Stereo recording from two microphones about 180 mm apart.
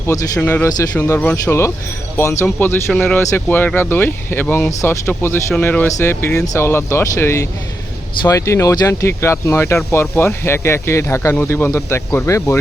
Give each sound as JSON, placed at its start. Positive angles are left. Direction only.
{"t": 0.1, "sound": "speech", "side_deg": 10}